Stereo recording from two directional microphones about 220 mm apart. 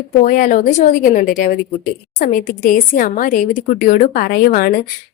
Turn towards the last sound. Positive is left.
turn(degrees=40)  # may be behind; listen again after turning